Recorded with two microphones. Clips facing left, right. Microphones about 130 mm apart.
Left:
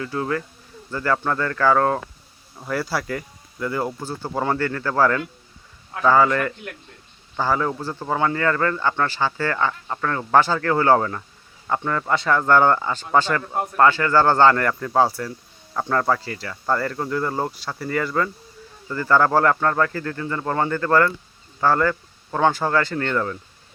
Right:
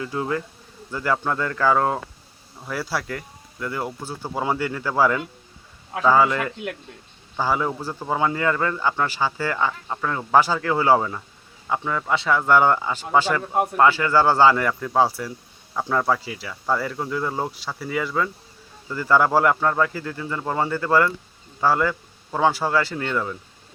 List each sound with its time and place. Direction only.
0.0 s speech: 20° right (ahead or behind)
2.6 s speech: centre (ahead or behind)
13.4 s speech: 20° right (ahead or behind)